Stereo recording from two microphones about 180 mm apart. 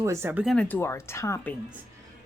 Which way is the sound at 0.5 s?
5° left (ahead or behind).